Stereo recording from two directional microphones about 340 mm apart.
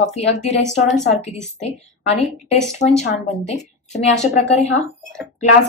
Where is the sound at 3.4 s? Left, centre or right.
Centre.